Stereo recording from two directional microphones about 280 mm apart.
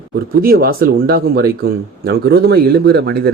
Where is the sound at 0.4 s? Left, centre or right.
Right.